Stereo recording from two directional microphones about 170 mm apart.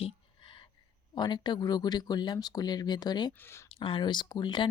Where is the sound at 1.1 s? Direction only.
25° left (ahead or behind).